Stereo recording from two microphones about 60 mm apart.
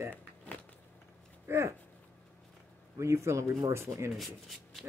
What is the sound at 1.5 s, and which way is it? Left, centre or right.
Speech, right.